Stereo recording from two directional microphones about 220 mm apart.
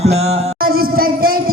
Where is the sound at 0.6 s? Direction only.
40° right (ahead or behind).